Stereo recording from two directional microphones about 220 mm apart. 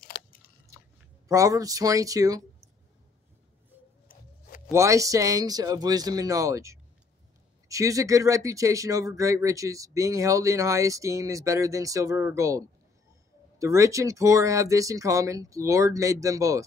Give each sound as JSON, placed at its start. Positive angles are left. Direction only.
{"t": 0.0, "sound": "chewing", "side_deg": 40}
{"t": 1.3, "sound": "speech", "side_deg": -15}
{"t": 4.7, "sound": "speech", "side_deg": -15}